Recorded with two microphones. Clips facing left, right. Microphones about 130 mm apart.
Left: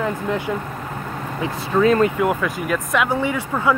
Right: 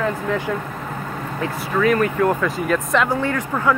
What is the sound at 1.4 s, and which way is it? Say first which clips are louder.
Speech: left 2 dB; 25° left (ahead or behind).